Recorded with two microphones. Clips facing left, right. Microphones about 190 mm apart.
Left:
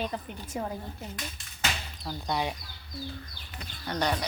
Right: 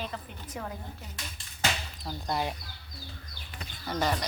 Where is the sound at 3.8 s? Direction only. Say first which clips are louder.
Even; centre (ahead or behind).